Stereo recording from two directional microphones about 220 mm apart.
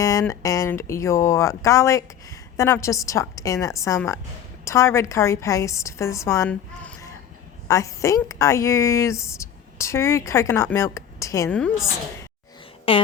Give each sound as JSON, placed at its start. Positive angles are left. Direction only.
{"t": 0.0, "sound": "a woman's voice", "side_deg": 15}
{"t": 12.9, "sound": "speech", "side_deg": 25}